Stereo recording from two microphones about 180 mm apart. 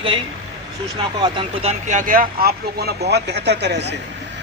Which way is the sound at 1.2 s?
30° right (ahead or behind).